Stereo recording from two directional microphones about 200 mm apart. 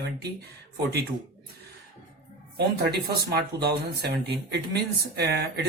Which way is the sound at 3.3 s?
55° right (ahead or behind).